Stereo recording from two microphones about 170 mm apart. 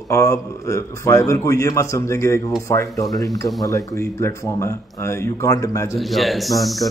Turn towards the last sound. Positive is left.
turn(degrees=0)  # may be behind; listen again after turning